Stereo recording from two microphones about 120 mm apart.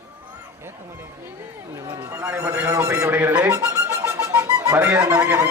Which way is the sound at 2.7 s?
25° right (ahead or behind).